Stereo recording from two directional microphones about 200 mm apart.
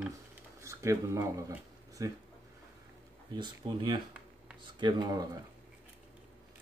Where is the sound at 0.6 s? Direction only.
15° right (ahead or behind).